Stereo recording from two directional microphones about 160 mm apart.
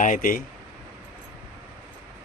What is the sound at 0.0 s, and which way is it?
Speech, 55° left (ahead or behind).